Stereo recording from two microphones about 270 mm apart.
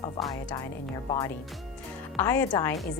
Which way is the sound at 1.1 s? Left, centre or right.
Centre.